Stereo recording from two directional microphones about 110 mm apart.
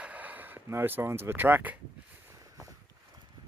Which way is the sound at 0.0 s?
15° right (ahead or behind).